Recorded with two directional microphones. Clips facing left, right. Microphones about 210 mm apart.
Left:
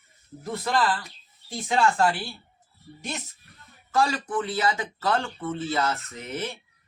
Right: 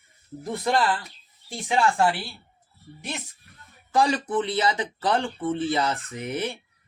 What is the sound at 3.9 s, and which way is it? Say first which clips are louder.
Speech: right 2 dB; 15° right (ahead or behind).